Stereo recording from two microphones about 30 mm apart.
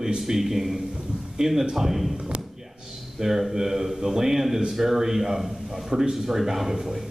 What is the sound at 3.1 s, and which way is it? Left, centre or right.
A man's voice, centre.